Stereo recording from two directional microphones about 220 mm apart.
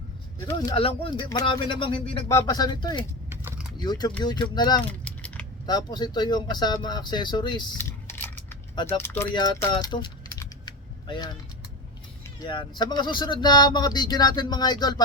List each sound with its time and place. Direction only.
0.4 s speech: 20° left (ahead or behind)
3.2 s typing: 10° right (ahead or behind)
3.8 s speech: 20° left (ahead or behind)
4.8 s typing: 5° left (ahead or behind)
5.6 s speech: 20° left (ahead or behind)
8.7 s speech: 20° left (ahead or behind)
9.7 s typing: 20° left (ahead or behind)
12.5 s speech: 20° left (ahead or behind)